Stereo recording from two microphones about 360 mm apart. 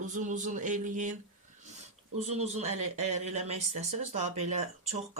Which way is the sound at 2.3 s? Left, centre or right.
Centre.